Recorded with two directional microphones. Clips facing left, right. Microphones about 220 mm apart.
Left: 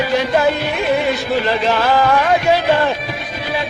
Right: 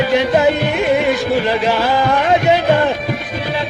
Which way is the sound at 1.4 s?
15° right (ahead or behind).